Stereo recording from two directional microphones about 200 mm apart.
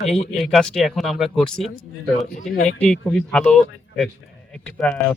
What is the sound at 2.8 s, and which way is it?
Speech, 5° left (ahead or behind).